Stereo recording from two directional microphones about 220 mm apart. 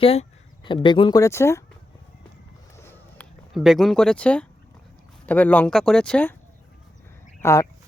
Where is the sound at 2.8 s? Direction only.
10° left (ahead or behind).